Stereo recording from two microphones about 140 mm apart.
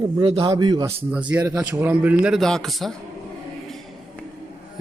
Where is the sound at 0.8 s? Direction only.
10° right (ahead or behind).